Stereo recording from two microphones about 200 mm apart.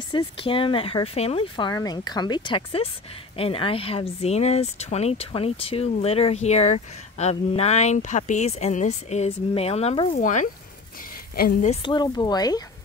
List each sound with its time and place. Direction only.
0.1 s speech: 25° left (ahead or behind)
10.1 s a woman's voice: 40° left (ahead or behind)
11.7 s speech: 25° left (ahead or behind)